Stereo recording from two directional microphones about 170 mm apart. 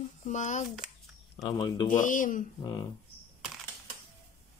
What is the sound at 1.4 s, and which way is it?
Speech, 25° left (ahead or behind).